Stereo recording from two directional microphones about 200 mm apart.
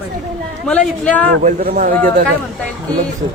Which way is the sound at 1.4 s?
45° right (ahead or behind).